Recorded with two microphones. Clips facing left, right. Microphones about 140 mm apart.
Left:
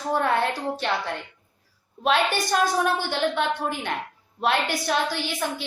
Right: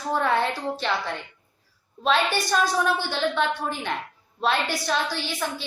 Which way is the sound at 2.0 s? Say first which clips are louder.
Even; 55° left (ahead or behind).